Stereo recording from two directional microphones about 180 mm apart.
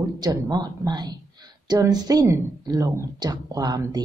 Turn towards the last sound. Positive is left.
turn(degrees=-20)  # may be behind; listen again after turning